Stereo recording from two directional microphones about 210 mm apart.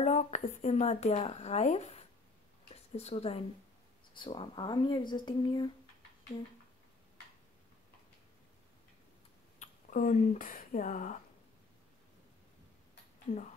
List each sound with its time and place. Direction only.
0.0 s a woman's voice: 30° left (ahead or behind)
9.6 s speech: 40° left (ahead or behind)
13.3 s speech: 40° left (ahead or behind)